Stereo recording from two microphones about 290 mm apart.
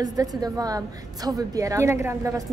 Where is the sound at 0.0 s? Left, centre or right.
Centre.